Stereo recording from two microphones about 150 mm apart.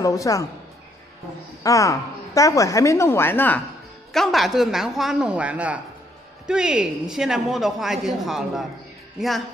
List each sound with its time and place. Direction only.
0.0 s a woman's voice: 25° left (ahead or behind)
1.6 s a woman's voice: 20° left (ahead or behind)
4.1 s a woman's voice: centre (ahead or behind)